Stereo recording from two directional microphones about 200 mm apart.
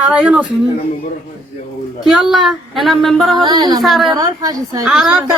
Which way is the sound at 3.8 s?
Centre (ahead or behind).